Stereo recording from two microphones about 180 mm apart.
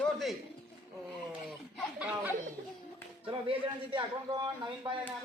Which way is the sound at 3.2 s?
30° right (ahead or behind).